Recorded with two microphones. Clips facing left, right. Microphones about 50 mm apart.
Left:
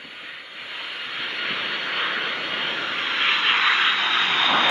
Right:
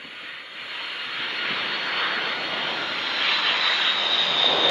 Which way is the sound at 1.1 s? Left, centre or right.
Centre.